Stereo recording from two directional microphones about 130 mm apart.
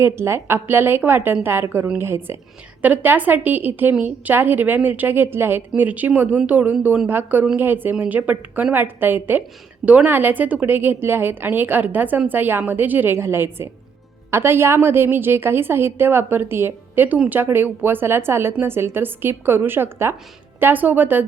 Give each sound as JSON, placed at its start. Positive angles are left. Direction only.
{"t": 0.0, "sound": "a woman's voice", "side_deg": -20}